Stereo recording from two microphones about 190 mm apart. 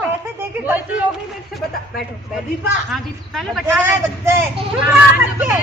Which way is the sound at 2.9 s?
Centre (ahead or behind).